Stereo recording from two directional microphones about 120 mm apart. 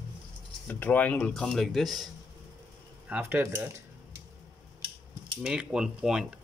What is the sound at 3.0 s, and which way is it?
Speech, 15° right (ahead or behind).